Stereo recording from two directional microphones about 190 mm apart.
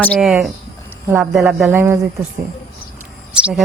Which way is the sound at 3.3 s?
5° right (ahead or behind).